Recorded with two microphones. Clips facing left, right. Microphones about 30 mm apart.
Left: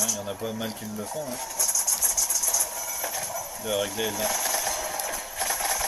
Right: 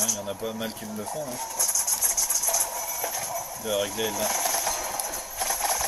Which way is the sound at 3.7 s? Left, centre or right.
Centre.